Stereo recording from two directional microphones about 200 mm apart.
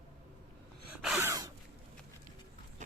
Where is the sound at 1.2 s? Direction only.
15° right (ahead or behind).